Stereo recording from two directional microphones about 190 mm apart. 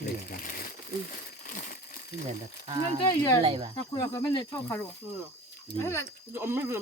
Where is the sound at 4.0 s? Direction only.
20° left (ahead or behind).